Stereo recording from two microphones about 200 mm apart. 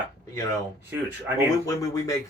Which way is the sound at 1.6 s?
15° left (ahead or behind).